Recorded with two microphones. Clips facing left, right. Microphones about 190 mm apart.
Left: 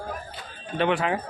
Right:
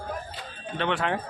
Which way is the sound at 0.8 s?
10° left (ahead or behind).